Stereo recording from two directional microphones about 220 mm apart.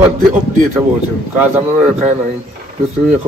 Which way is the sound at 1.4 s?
5° right (ahead or behind).